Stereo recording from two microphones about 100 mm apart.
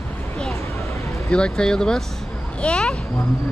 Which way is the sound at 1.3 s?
10° left (ahead or behind).